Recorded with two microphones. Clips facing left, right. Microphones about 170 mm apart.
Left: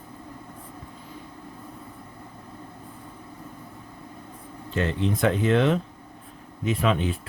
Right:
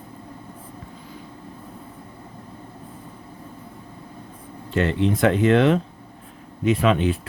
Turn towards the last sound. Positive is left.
turn(degrees=-75)  # may be behind; listen again after turning